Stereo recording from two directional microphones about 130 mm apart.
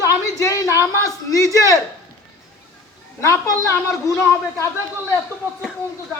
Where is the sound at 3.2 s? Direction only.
20° left (ahead or behind).